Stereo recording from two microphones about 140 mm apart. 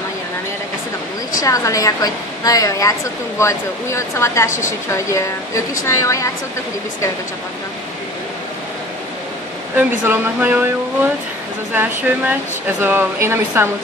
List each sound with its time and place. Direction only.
1.4 s a woman's voice: 25° left (ahead or behind)
9.8 s speech: 15° right (ahead or behind)
11.7 s speech: 10° right (ahead or behind)